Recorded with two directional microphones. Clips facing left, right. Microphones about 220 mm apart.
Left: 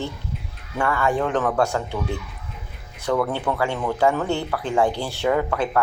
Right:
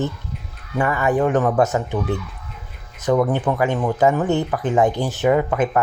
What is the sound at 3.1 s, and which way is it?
Speech, 15° right (ahead or behind).